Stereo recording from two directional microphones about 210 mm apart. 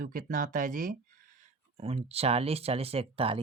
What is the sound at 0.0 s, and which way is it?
Speech, 40° right (ahead or behind).